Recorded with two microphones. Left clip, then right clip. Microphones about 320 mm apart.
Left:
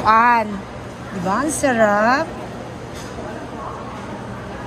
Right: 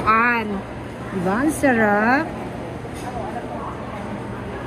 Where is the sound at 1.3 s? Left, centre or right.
Left.